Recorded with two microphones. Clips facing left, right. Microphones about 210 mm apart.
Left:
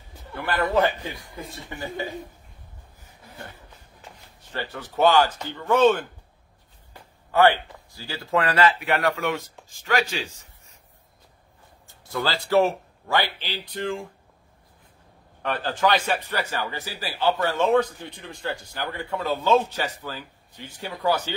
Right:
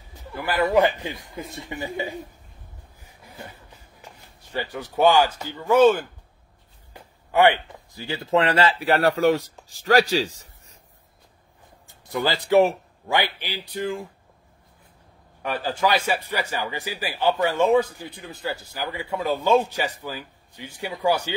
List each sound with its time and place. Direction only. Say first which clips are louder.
0.3 s a man's voice: right 3 dB; 10° right (ahead or behind)
4.4 s a man's voice: right 3 dB; 10° right (ahead or behind); by 10.8 s 35° right (ahead or behind)
12.0 s a man's voice: right 2 dB; 15° right (ahead or behind)
15.4 s a man's voice: even; 10° right (ahead or behind)